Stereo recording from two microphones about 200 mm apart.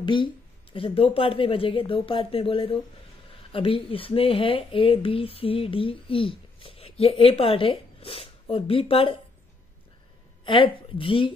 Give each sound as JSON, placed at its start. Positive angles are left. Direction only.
{"t": 0.0, "sound": "speech", "side_deg": 25}
{"t": 10.4, "sound": "speech", "side_deg": 25}